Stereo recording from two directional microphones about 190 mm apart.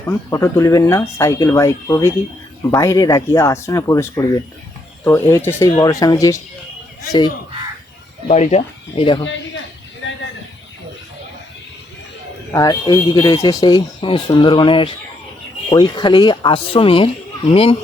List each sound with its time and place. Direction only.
0.0 s speech: 15° left (ahead or behind)
8.3 s speech: 35° left (ahead or behind)
12.5 s speech: 20° left (ahead or behind)